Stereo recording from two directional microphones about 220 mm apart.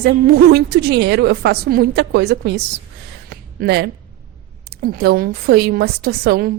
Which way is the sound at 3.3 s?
45° right (ahead or behind).